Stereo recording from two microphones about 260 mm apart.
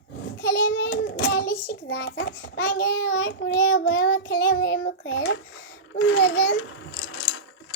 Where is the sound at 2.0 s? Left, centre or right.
Left.